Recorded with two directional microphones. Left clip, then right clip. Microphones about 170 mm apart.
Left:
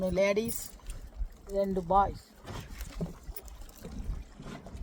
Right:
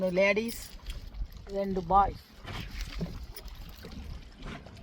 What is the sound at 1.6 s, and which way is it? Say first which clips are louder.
Speech: right 1 dB; 30° right (ahead or behind).